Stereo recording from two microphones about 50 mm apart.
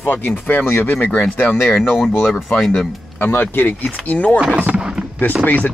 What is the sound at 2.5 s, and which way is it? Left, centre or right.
Speech, centre.